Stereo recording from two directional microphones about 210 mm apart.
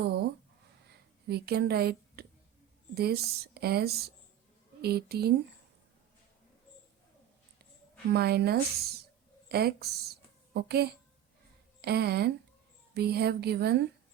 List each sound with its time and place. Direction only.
0.0 s a sound: 50° right (ahead or behind)
2.9 s speech: 50° right (ahead or behind)
8.1 s speech: 50° right (ahead or behind)